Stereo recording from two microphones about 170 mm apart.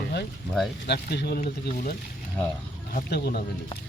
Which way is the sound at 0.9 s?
70° left (ahead or behind).